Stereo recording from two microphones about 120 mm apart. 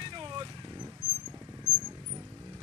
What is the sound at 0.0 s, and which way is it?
Vehicle, 40° right (ahead or behind).